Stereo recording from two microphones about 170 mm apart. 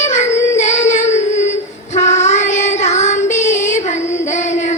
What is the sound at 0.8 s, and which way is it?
Child singing, 45° left (ahead or behind).